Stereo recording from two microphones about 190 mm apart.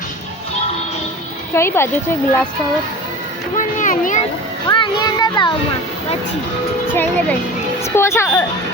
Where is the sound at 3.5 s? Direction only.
45° left (ahead or behind).